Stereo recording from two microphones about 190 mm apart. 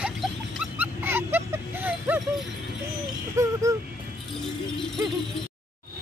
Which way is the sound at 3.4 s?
15° right (ahead or behind).